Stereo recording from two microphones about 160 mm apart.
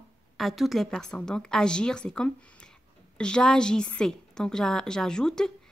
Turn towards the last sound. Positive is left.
turn(degrees=5)  # may be behind; listen again after turning